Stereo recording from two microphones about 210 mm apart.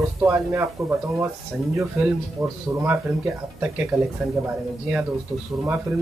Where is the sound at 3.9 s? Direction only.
15° right (ahead or behind).